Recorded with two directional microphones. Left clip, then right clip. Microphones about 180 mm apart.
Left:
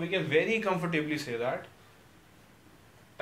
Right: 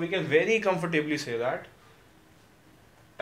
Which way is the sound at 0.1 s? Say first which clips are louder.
Right 3 dB; 25° right (ahead or behind).